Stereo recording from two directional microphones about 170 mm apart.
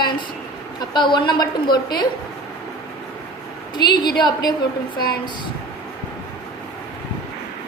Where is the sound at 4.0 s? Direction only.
25° left (ahead or behind).